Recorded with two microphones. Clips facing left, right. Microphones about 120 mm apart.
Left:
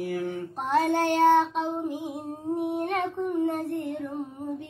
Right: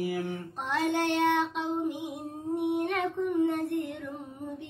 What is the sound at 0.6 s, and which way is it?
Child singing, 45° left (ahead or behind).